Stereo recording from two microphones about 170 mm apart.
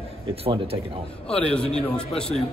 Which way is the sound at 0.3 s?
35° right (ahead or behind).